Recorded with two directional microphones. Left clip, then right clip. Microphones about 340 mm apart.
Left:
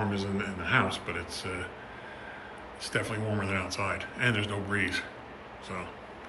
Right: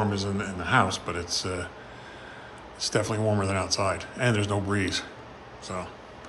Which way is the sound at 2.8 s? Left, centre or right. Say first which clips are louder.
Right 6 dB; centre.